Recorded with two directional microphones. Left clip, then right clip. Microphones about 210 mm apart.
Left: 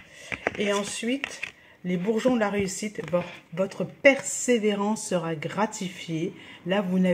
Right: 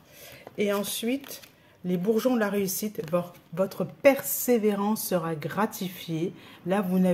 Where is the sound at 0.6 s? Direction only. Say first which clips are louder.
Right 3 dB; 20° right (ahead or behind).